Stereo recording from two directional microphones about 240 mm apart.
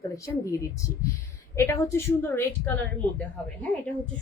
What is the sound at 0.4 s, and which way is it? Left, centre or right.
A woman's voice, centre.